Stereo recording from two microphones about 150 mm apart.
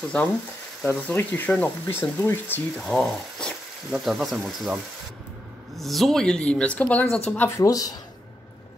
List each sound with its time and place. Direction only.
0.8 s speech: 15° left (ahead or behind)
2.9 s speech: centre (ahead or behind)
5.8 s speech: centre (ahead or behind); by 7.9 s 20° left (ahead or behind)